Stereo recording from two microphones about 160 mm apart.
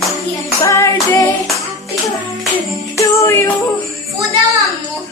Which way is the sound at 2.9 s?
15° left (ahead or behind).